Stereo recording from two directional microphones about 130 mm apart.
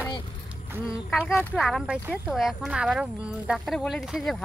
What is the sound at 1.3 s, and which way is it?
Speech, 10° left (ahead or behind).